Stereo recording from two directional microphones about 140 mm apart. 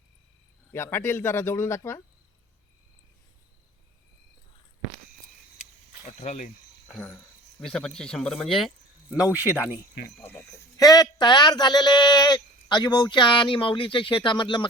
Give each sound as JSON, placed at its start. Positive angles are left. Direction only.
{"t": 0.7, "sound": "speech", "side_deg": 15}
{"t": 6.1, "sound": "speech", "side_deg": 55}
{"t": 6.9, "sound": "speech", "side_deg": 10}
{"t": 9.1, "sound": "speech", "side_deg": -10}
{"t": 10.2, "sound": "speech", "side_deg": 15}
{"t": 10.8, "sound": "speech", "side_deg": 25}